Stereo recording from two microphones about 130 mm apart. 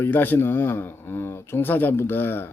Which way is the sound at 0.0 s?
15° left (ahead or behind).